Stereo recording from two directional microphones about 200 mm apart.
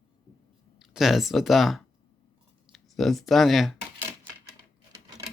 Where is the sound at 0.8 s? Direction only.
Centre (ahead or behind).